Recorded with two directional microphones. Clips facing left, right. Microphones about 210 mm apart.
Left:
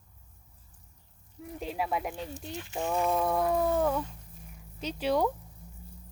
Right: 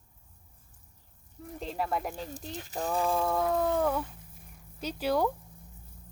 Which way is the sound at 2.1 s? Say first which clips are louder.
Left 1 dB; 40° right (ahead or behind).